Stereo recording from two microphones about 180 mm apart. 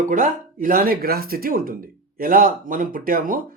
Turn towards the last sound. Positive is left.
turn(degrees=-50)  # may be behind; listen again after turning